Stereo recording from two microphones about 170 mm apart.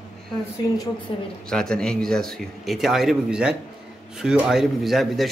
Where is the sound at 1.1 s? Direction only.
30° left (ahead or behind).